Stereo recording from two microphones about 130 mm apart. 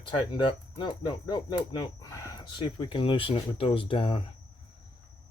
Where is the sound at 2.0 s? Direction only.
25° left (ahead or behind).